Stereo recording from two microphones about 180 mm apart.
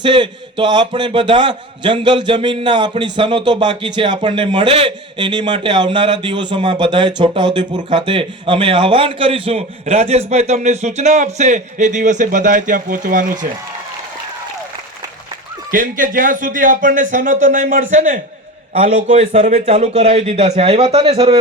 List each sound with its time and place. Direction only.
0.0 s a man's voice: 25° right (ahead or behind); by 13.5 s 45° right (ahead or behind)
15.7 s a man's voice: 50° right (ahead or behind); by 21.3 s 30° right (ahead or behind)